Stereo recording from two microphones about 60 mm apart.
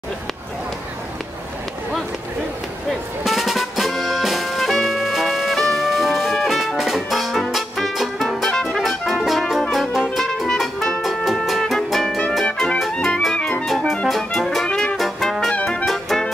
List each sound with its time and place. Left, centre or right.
3.3 s music: centre
13.0 s clarinet: centre
14.0 s music: centre
14.7 s brass instrument: centre
15.0 s brass instrument: centre
15.6 s music: centre
15.9 s music: centre